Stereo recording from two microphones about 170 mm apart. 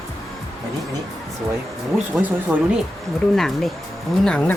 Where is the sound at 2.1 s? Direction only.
5° right (ahead or behind).